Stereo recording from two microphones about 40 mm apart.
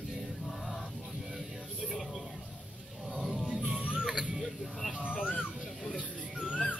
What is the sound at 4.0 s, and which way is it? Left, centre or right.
Music, centre.